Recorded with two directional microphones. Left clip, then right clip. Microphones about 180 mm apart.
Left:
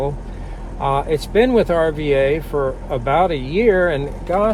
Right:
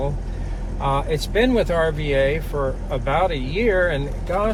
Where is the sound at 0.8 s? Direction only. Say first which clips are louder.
Left 4 dB; 60° left (ahead or behind).